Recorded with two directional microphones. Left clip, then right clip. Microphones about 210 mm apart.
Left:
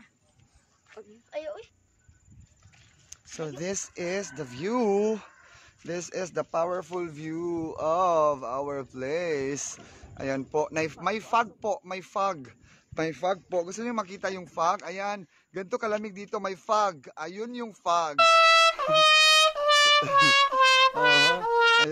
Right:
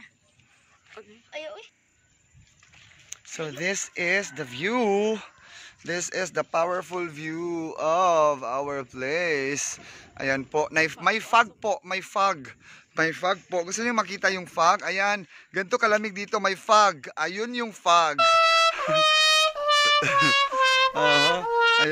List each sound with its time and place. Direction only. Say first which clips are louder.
0.9 s a sound: right 2 dB; 10° right (ahead or behind)
1.3 s speech: left 1 dB; 45° left (ahead or behind)
3.4 s speech: right 5 dB; centre (ahead or behind)